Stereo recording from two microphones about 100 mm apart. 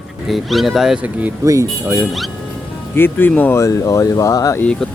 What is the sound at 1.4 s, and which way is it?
Speech, 30° right (ahead or behind).